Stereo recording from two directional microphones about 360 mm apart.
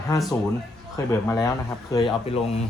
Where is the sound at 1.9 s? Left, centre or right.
Centre.